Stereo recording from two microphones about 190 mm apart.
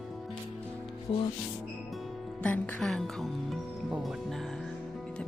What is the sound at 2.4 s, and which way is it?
Speech, 5° left (ahead or behind).